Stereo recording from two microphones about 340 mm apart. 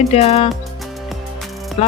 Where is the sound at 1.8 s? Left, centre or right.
Centre.